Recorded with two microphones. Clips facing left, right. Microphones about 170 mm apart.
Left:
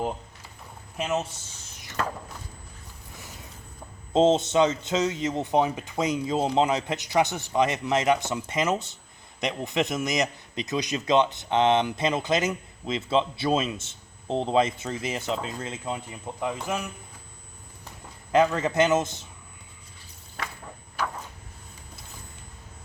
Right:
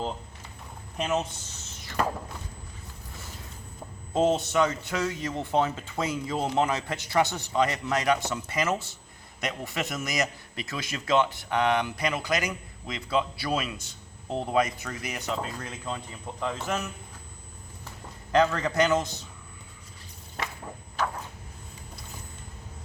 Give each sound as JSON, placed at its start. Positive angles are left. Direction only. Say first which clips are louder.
{"t": 0.9, "sound": "speech", "louder": "even", "side_deg": 5}
{"t": 4.1, "sound": "a man's voice", "louder": "left 4 dB", "side_deg": 25}
{"t": 18.3, "sound": "a man's voice", "louder": "left 2 dB", "side_deg": 20}
{"t": 21.0, "sound": "a sound", "louder": "right 1 dB", "side_deg": 10}